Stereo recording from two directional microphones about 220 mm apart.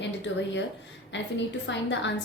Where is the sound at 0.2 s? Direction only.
55° left (ahead or behind).